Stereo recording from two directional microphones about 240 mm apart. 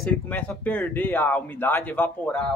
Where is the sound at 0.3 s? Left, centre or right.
Centre.